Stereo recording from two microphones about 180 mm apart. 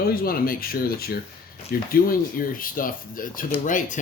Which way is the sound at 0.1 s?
55° left (ahead or behind).